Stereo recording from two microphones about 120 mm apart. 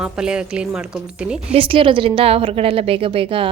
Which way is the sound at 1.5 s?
50° right (ahead or behind).